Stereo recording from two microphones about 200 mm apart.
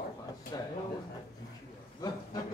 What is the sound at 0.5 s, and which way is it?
Speech, 20° left (ahead or behind).